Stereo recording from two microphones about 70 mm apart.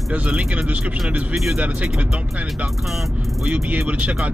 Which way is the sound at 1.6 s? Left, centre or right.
Right.